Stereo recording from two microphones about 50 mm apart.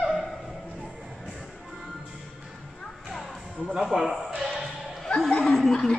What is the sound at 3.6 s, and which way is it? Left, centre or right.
Speech, centre.